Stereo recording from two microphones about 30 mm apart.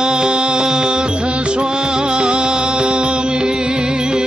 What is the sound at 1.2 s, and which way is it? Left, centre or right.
Music, right.